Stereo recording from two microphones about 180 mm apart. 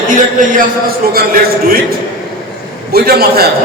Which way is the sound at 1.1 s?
55° right (ahead or behind).